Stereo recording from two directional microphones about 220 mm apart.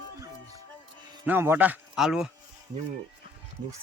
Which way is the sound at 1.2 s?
10° right (ahead or behind).